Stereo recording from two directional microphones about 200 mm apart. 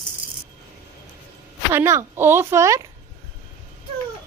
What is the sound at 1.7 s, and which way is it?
Speech, 15° right (ahead or behind).